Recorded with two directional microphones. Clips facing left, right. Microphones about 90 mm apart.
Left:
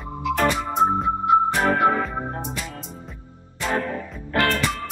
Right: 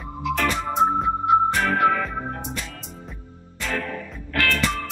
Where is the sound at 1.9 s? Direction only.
30° left (ahead or behind).